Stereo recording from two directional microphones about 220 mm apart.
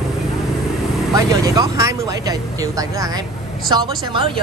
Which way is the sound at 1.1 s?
15° right (ahead or behind).